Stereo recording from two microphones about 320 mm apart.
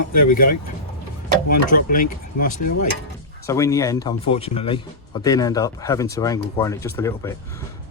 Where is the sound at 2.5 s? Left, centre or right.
Left.